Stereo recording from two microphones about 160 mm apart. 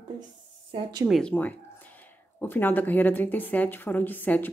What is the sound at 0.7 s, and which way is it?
Speech, 35° right (ahead or behind).